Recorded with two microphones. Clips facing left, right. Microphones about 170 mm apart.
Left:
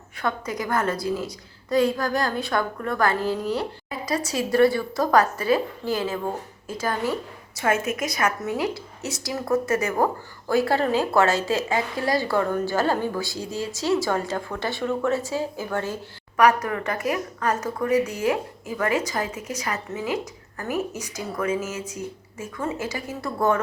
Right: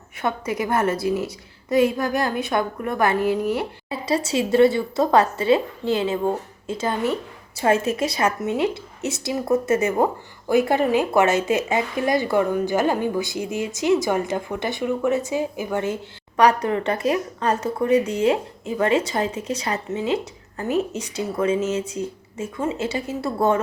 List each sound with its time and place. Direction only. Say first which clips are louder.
0.2 s a woman's voice: right 3 dB; 25° right (ahead or behind)
16.4 s a woman's voice: right 2 dB; 30° right (ahead or behind)